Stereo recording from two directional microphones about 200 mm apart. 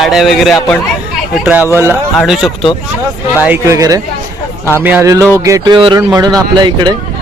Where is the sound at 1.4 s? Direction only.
10° right (ahead or behind).